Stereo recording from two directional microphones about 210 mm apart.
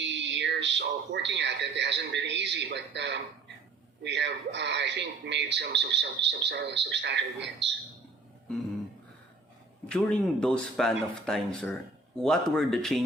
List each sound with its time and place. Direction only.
0.0 s speech: 60° right (ahead or behind)
9.9 s speech: 5° left (ahead or behind)